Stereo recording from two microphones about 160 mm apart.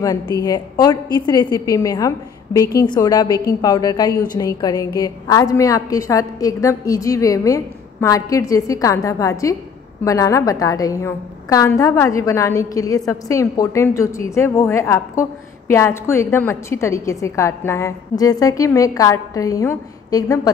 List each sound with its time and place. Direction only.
0.0 s a woman's voice: 20° left (ahead or behind)